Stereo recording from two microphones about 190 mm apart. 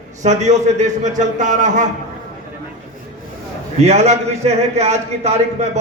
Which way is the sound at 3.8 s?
35° right (ahead or behind).